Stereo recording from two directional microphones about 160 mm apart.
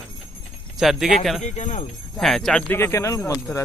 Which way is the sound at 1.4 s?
45° left (ahead or behind).